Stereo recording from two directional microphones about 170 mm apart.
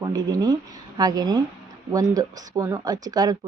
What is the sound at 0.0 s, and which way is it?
A woman's voice, 20° right (ahead or behind).